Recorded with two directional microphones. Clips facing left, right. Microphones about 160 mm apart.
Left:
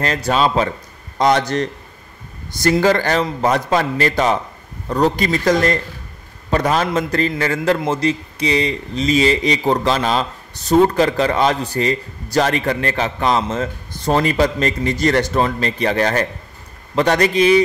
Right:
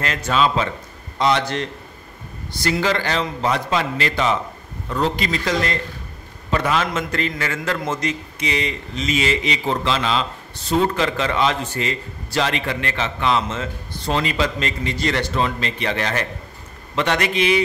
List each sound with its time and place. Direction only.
0.0 s a man's voice: 35° left (ahead or behind)